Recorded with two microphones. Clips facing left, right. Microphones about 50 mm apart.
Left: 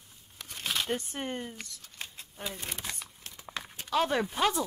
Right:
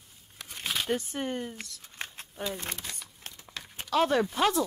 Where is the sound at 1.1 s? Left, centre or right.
Centre.